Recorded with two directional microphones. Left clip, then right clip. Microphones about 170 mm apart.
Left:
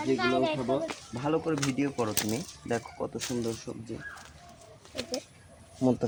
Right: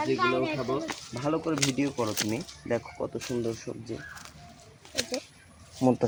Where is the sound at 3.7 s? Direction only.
15° right (ahead or behind).